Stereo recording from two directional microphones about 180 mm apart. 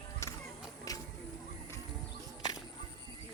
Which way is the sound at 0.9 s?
20° left (ahead or behind).